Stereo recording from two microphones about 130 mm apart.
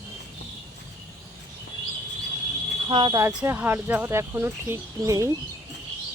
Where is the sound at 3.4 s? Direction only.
15° right (ahead or behind).